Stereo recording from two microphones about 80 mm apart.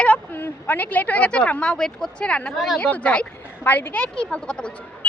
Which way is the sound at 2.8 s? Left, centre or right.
Centre.